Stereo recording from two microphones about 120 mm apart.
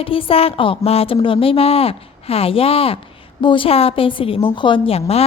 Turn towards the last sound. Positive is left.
turn(degrees=55)  # may be behind; listen again after turning